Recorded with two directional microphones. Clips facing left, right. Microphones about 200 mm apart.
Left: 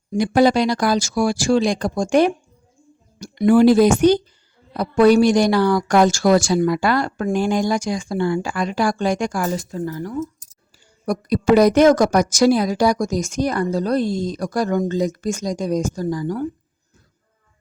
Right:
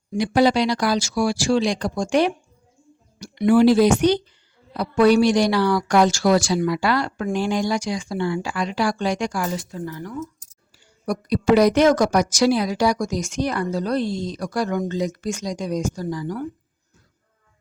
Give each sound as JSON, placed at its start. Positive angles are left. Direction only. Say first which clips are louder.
{"t": 0.1, "sound": "a woman's voice", "louder": "left 2 dB", "side_deg": 50}
{"t": 11.0, "sound": "speech", "louder": "left 2 dB", "side_deg": 45}